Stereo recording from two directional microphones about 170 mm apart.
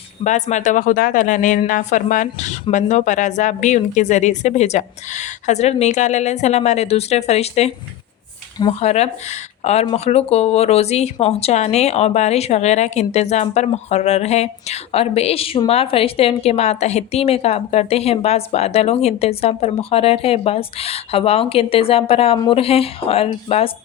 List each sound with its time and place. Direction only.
0.3 s speech: 45° left (ahead or behind)